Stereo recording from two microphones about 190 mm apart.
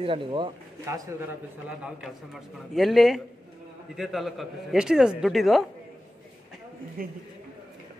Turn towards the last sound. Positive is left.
turn(degrees=-50)  # may be behind; listen again after turning